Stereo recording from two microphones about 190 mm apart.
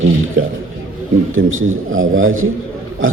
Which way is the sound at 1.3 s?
90° right.